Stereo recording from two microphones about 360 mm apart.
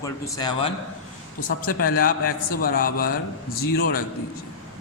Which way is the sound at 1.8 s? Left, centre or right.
Left.